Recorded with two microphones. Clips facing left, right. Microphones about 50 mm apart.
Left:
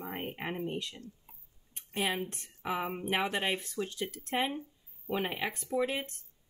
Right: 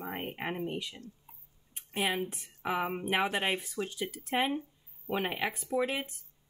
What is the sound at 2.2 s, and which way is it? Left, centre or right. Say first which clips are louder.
Speech: right 2 dB; centre.